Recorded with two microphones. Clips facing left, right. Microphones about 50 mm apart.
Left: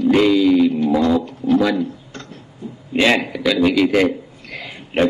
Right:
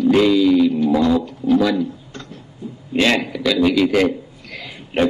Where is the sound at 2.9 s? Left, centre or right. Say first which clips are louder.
Left 1 dB; centre.